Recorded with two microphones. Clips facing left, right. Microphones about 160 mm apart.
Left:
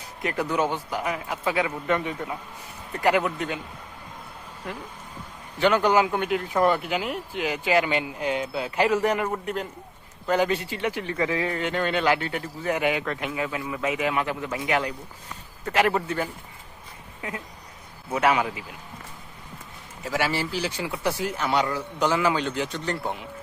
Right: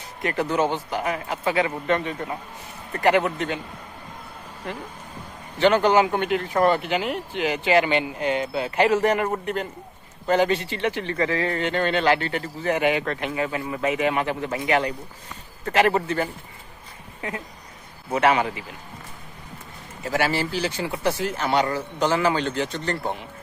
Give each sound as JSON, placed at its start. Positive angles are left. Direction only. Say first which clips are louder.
{"t": 0.2, "sound": "a man's voice", "louder": "right 2 dB", "side_deg": 0}
{"t": 5.5, "sound": "speech", "louder": "right 3 dB", "side_deg": 5}
{"t": 20.1, "sound": "speech", "louder": "right 3 dB", "side_deg": 0}